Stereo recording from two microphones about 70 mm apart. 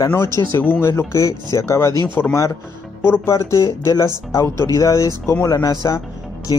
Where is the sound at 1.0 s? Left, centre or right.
Left.